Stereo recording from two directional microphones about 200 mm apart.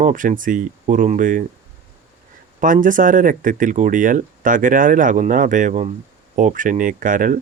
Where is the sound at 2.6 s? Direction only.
40° right (ahead or behind).